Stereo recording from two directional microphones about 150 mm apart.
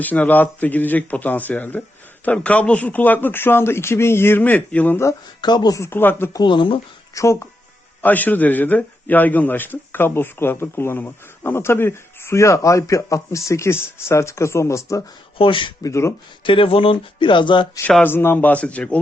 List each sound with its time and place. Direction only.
0.0 s a man's voice: 10° left (ahead or behind)
5.4 s speech: 30° left (ahead or behind)
6.4 s speech: 35° left (ahead or behind)
7.1 s a man's voice: 20° left (ahead or behind)
15.4 s speech: 35° left (ahead or behind)
15.9 s speech: 20° left (ahead or behind)
16.4 s speech: 35° left (ahead or behind)
18.0 s a man's voice: 15° left (ahead or behind)